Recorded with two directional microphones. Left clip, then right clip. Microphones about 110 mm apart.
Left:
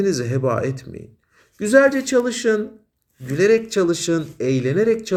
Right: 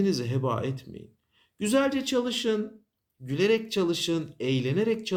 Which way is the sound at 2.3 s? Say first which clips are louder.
Left 8 dB; 45° right (ahead or behind).